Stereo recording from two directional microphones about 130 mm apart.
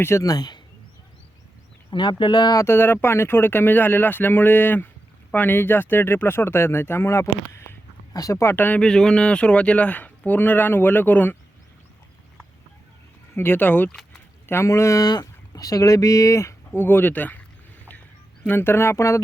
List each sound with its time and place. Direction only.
0.0 s speech: 25° left (ahead or behind)
1.9 s speech: 40° left (ahead or behind)
2.6 s speech: 15° left (ahead or behind)
13.3 s speech: 15° left (ahead or behind)
18.4 s speech: 15° left (ahead or behind)